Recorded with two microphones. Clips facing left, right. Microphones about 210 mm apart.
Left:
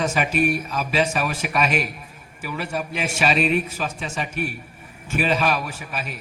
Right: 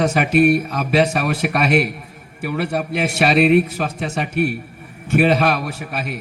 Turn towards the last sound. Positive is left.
turn(degrees=-65)  # may be behind; listen again after turning